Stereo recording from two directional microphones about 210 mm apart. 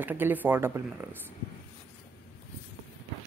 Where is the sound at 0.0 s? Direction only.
10° right (ahead or behind).